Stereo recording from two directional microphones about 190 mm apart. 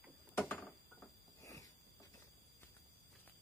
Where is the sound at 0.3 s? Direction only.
10° left (ahead or behind).